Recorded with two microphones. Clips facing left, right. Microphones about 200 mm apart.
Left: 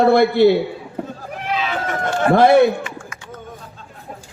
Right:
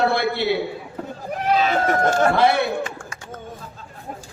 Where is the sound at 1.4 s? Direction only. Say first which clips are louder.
Right 4 dB; 40° right (ahead or behind).